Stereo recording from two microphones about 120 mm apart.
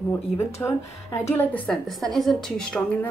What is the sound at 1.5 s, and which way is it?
A woman's voice, 5° left (ahead or behind).